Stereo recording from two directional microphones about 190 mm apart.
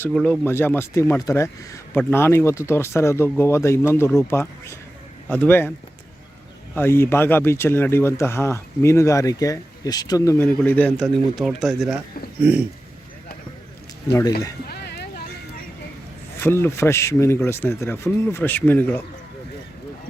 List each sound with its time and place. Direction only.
0.1 s speech: centre (ahead or behind)
0.4 s speech: 10° left (ahead or behind)
6.7 s speech: 10° left (ahead or behind); by 12.6 s 10° right (ahead or behind)
14.1 s speech: 20° left (ahead or behind)
14.7 s boat: 55° left (ahead or behind)
16.4 s speech: 10° left (ahead or behind)